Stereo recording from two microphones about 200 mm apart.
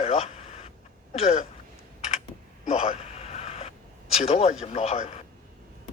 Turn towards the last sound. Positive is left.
turn(degrees=30)  # may be behind; listen again after turning